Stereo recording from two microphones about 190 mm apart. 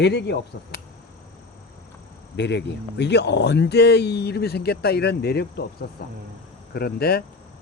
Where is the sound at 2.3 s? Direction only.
65° left (ahead or behind).